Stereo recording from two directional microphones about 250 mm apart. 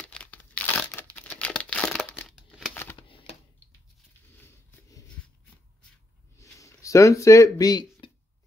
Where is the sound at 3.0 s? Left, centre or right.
Left.